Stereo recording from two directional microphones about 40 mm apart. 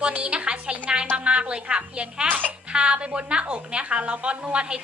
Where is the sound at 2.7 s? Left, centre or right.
Right.